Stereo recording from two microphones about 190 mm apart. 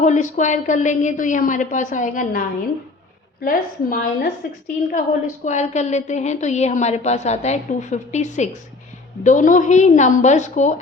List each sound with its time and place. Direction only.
0.0 s a woman's voice: 40° left (ahead or behind)
3.4 s a woman's voice: 50° left (ahead or behind)